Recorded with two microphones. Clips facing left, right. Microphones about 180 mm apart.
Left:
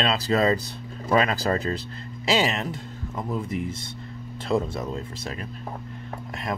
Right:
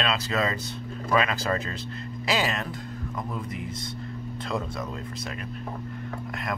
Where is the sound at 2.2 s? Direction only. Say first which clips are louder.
Left 4 dB; 25° left (ahead or behind).